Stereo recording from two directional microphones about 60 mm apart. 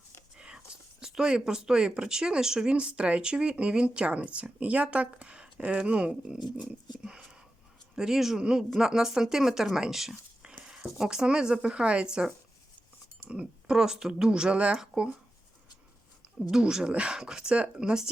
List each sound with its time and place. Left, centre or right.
0.3 s speech: centre
6.6 s speech: right
7.9 s speech: centre
10.5 s a sound: centre
10.9 s speech: centre
13.7 s speech: centre
16.5 s speech: centre